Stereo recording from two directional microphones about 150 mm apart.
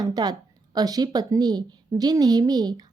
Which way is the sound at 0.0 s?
25° right (ahead or behind).